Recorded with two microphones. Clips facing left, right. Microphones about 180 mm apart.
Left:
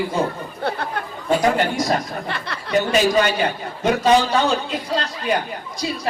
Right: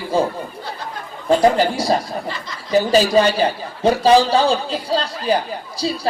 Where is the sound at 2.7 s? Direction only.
30° right (ahead or behind).